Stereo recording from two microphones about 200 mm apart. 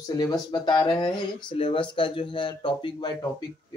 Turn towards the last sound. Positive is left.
turn(degrees=25)  # may be behind; listen again after turning